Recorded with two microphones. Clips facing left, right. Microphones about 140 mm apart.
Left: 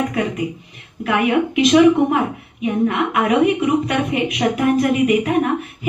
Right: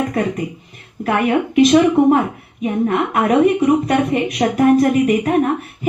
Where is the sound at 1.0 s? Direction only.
45° right (ahead or behind).